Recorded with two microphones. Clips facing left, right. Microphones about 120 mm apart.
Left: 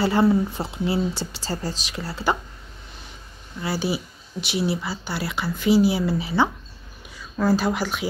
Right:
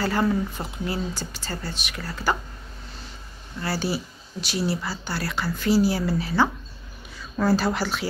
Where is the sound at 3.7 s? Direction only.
15° left (ahead or behind).